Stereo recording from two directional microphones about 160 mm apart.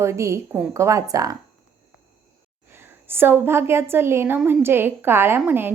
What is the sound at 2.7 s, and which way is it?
A woman's voice, 15° right (ahead or behind).